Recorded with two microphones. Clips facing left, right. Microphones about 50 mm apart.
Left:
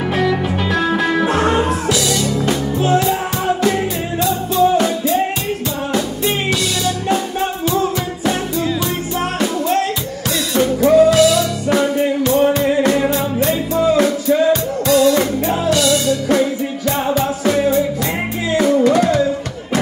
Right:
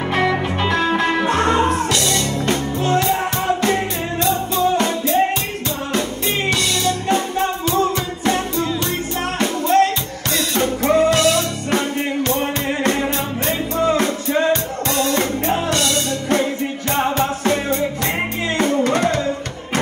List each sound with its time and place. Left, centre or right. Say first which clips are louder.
0.1 s music: even; right
1.3 s music: left 1 dB; right
6.5 s music: left 1 dB; right
9.4 s music: right 4 dB; right